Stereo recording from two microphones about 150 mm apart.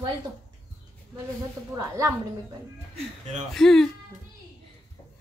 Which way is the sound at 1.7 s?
20° right (ahead or behind).